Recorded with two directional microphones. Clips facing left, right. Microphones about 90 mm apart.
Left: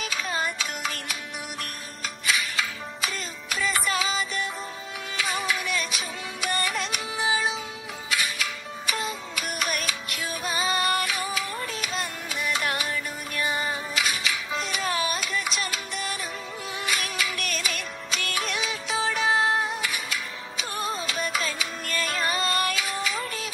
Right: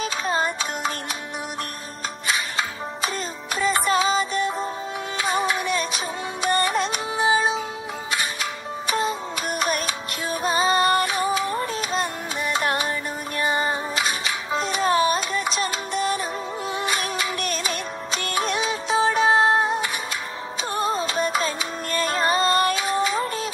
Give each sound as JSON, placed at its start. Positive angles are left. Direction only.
{"t": 0.0, "sound": "music", "side_deg": -35}
{"t": 2.2, "sound": "music", "side_deg": -35}